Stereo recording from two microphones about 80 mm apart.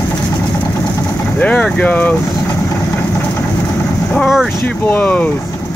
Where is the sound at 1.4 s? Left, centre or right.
Centre.